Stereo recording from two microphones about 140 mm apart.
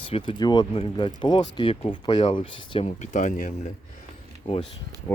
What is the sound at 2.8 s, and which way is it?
Speech, 60° left (ahead or behind).